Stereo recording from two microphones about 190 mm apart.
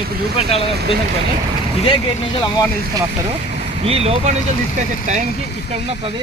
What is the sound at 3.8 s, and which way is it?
Speech, 30° right (ahead or behind).